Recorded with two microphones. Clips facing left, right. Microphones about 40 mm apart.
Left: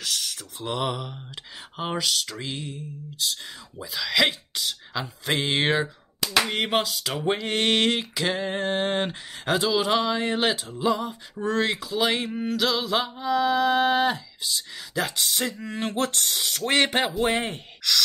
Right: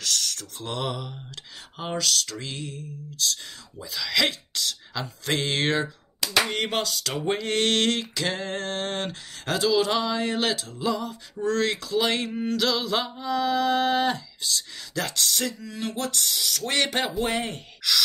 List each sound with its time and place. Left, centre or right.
0.0 s a sound: centre
17.2 s speech: left
17.8 s gasp: centre